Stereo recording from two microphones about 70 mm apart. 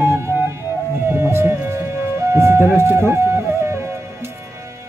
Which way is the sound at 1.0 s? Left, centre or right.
Right.